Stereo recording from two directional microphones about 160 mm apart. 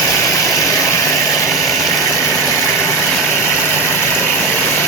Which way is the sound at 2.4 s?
15° left (ahead or behind).